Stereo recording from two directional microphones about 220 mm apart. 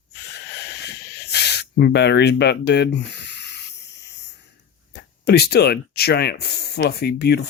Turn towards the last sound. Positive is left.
turn(degrees=45)  # may be behind; listen again after turning